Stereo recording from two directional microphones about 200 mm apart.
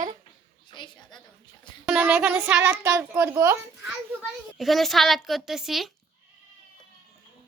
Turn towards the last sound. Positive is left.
turn(degrees=0)  # may be behind; listen again after turning